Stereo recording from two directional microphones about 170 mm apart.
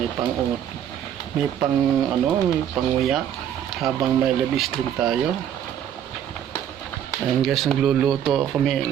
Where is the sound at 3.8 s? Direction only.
Centre (ahead or behind).